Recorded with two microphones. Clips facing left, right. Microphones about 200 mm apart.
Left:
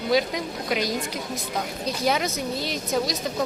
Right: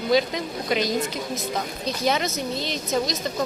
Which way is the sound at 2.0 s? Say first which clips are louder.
Right 1 dB; 10° left (ahead or behind).